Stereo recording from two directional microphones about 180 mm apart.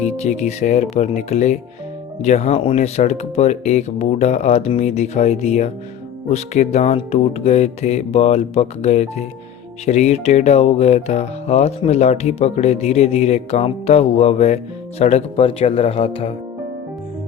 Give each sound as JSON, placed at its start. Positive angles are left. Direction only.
{"t": 0.0, "sound": "speech", "side_deg": 40}